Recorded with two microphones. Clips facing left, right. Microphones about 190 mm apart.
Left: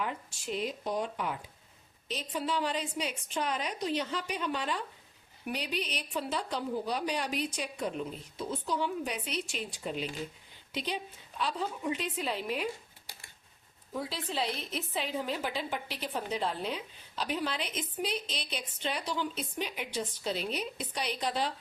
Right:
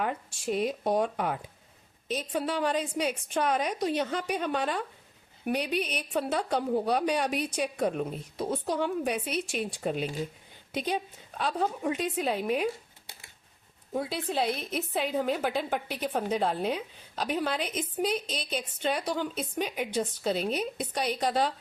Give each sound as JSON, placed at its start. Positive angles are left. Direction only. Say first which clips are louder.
{"t": 0.0, "sound": "a woman's voice", "louder": "right 5 dB", "side_deg": -50}
{"t": 13.9, "sound": "a woman's voice", "louder": "right 5 dB", "side_deg": -55}